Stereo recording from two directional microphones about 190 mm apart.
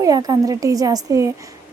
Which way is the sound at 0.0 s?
20° right (ahead or behind).